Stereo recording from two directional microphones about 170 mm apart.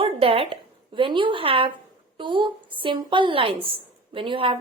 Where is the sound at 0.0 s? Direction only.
35° right (ahead or behind).